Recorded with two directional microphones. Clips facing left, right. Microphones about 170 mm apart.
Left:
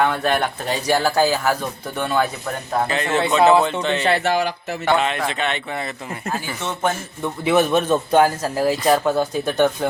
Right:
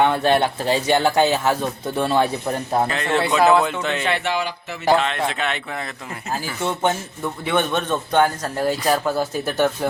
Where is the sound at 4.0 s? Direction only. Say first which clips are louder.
Left 6 dB; 40° left (ahead or behind).